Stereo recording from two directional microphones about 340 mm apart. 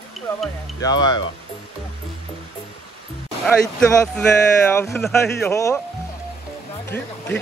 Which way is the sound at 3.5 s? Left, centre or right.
Centre.